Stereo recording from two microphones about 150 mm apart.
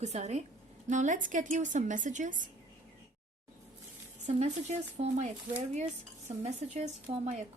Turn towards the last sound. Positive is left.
turn(degrees=-50)  # may be behind; listen again after turning